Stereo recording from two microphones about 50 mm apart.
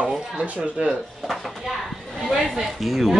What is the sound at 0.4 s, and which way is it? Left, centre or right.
Speech, right.